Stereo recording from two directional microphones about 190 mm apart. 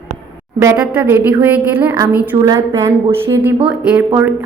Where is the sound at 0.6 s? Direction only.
15° right (ahead or behind).